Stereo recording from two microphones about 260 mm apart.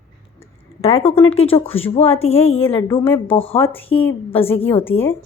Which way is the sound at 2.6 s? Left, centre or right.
Centre.